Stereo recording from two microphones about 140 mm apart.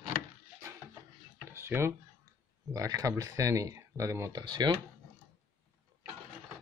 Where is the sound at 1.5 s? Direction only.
20° right (ahead or behind).